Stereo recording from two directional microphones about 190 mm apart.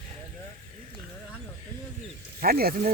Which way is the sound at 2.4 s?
50° right (ahead or behind).